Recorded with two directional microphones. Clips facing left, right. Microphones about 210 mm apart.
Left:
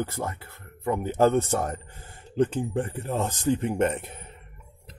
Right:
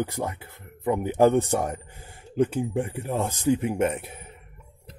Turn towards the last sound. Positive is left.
turn(degrees=-10)  # may be behind; listen again after turning